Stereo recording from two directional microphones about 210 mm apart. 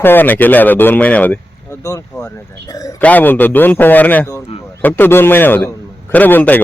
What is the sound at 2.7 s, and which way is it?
Speech, 15° left (ahead or behind).